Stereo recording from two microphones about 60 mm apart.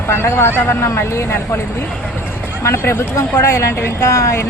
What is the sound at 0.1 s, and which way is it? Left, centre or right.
Speech, left.